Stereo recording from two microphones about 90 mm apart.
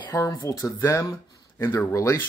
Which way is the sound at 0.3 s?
35° left (ahead or behind).